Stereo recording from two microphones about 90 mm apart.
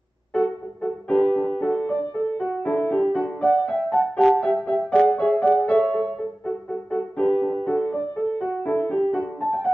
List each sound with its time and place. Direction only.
1.0 s music: 10° left (ahead or behind)
3.0 s music: 5° left (ahead or behind)
5.4 s music: 5° right (ahead or behind)
5.7 s music: 15° left (ahead or behind)